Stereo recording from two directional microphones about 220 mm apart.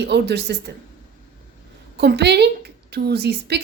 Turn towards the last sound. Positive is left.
turn(degrees=-50)  # may be behind; listen again after turning